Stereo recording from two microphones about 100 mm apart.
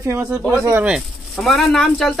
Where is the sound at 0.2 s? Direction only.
15° right (ahead or behind).